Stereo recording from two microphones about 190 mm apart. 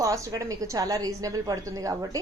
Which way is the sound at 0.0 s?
15° right (ahead or behind).